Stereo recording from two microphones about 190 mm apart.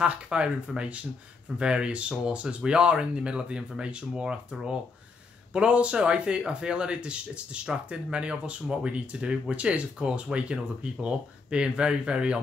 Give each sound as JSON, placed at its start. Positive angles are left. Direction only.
{"t": 0.0, "sound": "speech", "side_deg": -5}